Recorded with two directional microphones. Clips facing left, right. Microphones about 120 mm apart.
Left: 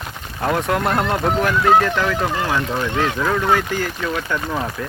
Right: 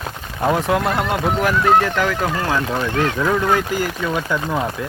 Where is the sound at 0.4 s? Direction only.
15° right (ahead or behind).